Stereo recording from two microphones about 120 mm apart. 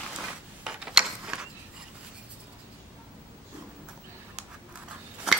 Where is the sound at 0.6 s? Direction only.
5° right (ahead or behind).